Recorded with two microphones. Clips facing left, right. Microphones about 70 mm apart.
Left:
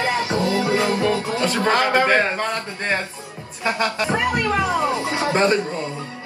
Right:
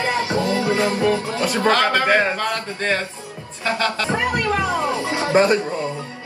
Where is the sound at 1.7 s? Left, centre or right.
Left.